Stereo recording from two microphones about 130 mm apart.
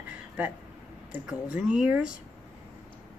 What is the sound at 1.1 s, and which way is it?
A woman's voice, 10° right (ahead or behind).